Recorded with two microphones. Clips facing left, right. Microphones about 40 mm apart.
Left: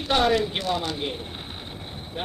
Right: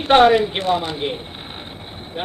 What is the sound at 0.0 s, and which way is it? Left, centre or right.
Speech, right.